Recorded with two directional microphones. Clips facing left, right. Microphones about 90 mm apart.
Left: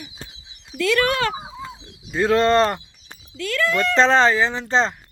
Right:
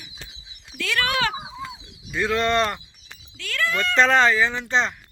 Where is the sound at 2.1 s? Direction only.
35° left (ahead or behind).